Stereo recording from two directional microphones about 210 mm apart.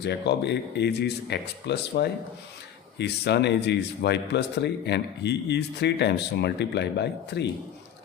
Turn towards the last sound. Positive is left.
turn(degrees=55)  # may be behind; listen again after turning